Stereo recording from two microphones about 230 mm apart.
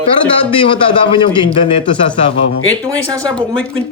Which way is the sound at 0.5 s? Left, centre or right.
Left.